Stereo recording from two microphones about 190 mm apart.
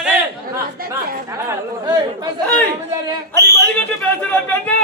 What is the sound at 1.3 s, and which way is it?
Speech, 20° right (ahead or behind).